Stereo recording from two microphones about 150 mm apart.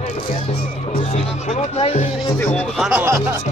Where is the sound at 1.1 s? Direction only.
50° left (ahead or behind).